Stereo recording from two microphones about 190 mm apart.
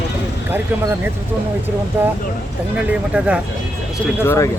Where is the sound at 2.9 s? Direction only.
5° right (ahead or behind).